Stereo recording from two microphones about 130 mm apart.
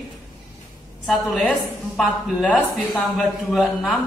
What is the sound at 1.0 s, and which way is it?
Speech, centre (ahead or behind).